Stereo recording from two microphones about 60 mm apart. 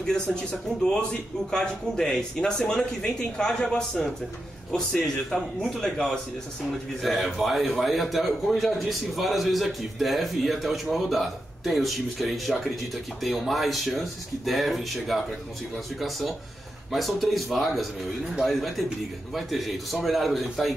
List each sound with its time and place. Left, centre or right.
0.0 s a man's voice: centre
16.9 s a man's voice: centre